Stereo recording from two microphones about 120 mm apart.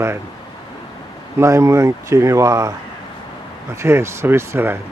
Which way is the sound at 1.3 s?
25° right (ahead or behind).